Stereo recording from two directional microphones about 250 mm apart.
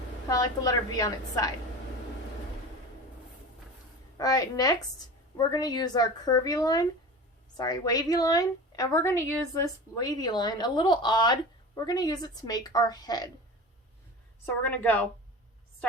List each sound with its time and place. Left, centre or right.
0.3 s a woman's voice: centre
4.2 s a woman's voice: centre
14.4 s a woman's voice: centre